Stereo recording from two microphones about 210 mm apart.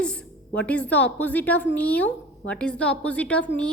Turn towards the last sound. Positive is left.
turn(degrees=5)  # may be behind; listen again after turning